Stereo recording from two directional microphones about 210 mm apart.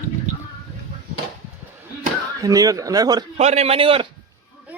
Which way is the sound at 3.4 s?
30° right (ahead or behind).